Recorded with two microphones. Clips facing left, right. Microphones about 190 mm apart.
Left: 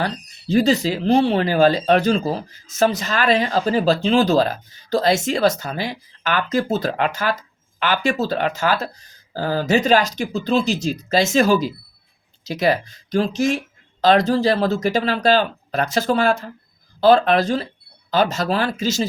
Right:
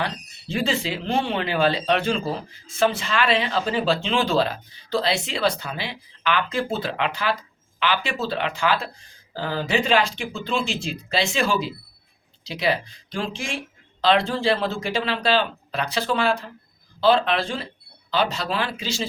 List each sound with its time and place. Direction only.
0.0 s speech: 40° left (ahead or behind)